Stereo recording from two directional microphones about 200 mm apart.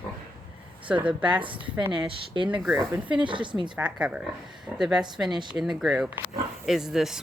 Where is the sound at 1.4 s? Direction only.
25° right (ahead or behind).